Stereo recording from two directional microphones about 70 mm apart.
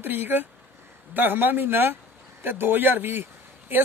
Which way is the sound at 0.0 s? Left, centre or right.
Right.